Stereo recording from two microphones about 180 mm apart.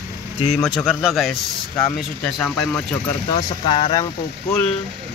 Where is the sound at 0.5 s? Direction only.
Centre (ahead or behind).